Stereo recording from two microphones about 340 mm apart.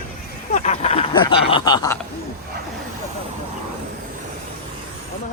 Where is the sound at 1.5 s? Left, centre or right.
Centre.